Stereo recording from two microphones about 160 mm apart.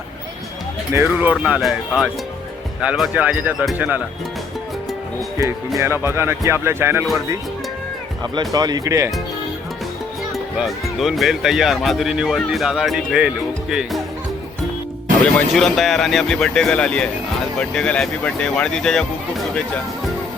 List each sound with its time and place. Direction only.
1.0 s speech: 10° right (ahead or behind)
5.4 s speech: 20° right (ahead or behind)
8.2 s speech: 25° right (ahead or behind)
10.3 s speech: centre (ahead or behind)
15.5 s speech: centre (ahead or behind)